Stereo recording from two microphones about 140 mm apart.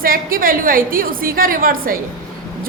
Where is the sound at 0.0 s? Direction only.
90° right.